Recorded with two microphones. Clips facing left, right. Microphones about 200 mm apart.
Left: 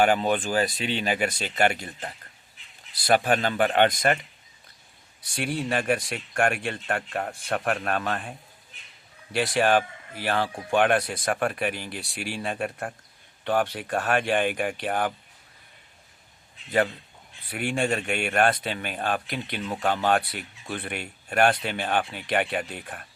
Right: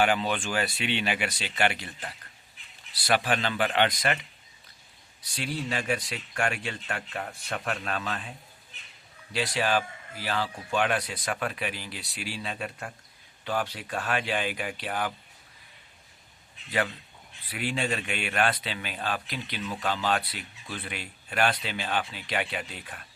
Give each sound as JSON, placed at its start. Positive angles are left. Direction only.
{"t": 0.0, "sound": "speech", "side_deg": 45}
{"t": 5.3, "sound": "speech", "side_deg": 55}
{"t": 9.3, "sound": "speech", "side_deg": 55}
{"t": 17.5, "sound": "speech", "side_deg": 50}